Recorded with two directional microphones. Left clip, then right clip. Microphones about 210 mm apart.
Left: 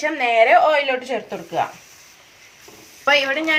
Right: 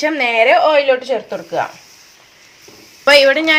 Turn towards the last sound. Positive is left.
turn(degrees=-50)  # may be behind; listen again after turning